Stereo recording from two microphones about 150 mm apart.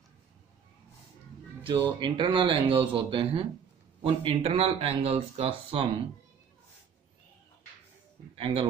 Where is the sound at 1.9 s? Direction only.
30° right (ahead or behind).